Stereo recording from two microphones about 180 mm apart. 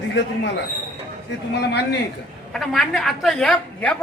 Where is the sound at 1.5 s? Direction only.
70° left (ahead or behind).